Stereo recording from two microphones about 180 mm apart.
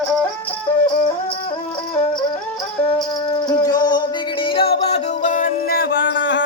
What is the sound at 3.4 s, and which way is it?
Music, 25° left (ahead or behind).